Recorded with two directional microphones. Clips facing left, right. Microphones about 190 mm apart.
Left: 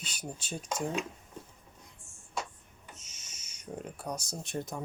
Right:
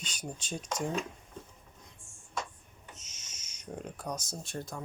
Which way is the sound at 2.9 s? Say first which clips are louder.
Left 1 dB; 10° left (ahead or behind).